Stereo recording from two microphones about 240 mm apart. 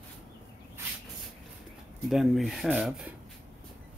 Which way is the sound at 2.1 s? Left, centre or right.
Centre.